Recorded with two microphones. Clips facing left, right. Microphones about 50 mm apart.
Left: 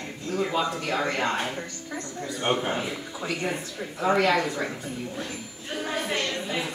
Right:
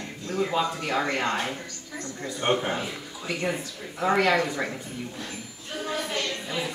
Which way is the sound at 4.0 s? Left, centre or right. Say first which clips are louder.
Even; centre.